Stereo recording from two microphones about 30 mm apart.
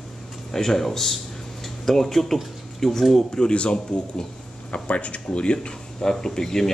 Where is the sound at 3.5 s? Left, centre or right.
Left.